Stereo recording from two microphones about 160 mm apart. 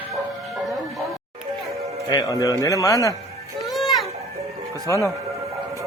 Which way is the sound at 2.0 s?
25° left (ahead or behind).